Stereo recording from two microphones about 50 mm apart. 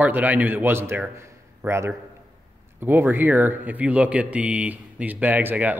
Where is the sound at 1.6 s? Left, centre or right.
Right.